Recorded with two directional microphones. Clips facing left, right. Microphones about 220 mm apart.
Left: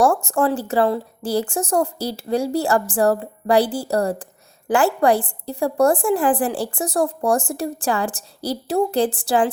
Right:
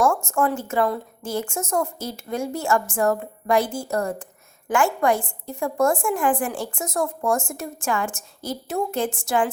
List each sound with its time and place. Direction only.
0.0 s a woman's voice: 35° left (ahead or behind)